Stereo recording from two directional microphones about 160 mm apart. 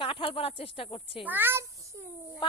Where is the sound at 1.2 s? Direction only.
10° right (ahead or behind).